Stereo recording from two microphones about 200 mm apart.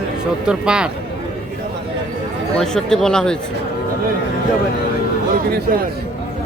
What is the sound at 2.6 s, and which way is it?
Speech, 5° left (ahead or behind).